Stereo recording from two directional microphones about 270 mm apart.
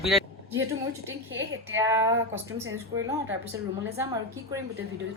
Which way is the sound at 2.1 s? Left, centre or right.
Right.